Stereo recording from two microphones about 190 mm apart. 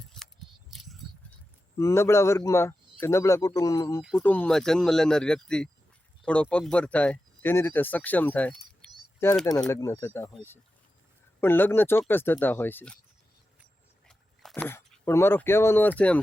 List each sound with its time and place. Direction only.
0.1 s scissors: centre (ahead or behind)
0.7 s a sound: centre (ahead or behind)
1.8 s speech: 15° left (ahead or behind)
9.6 s speech: 15° left (ahead or behind)
14.1 s speech: 5° left (ahead or behind)